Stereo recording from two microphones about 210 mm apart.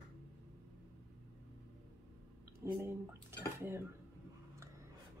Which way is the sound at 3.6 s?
10° right (ahead or behind).